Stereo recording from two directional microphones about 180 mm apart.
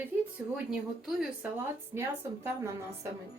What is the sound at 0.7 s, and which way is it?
Speech, 5° right (ahead or behind).